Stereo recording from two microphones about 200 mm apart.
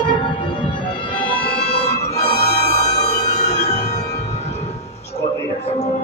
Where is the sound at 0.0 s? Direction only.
25° left (ahead or behind).